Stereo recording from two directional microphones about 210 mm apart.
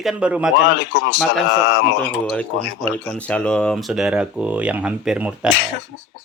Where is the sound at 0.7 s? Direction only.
55° left (ahead or behind).